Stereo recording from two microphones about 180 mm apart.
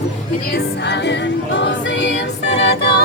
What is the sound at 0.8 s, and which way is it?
Music, 75° left (ahead or behind).